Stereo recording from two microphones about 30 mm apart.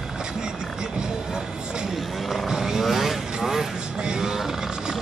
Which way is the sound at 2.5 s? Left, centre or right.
Centre.